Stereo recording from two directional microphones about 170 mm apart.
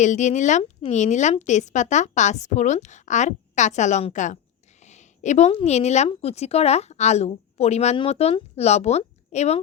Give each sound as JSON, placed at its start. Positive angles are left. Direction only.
{"t": 0.0, "sound": "a woman's voice", "side_deg": 45}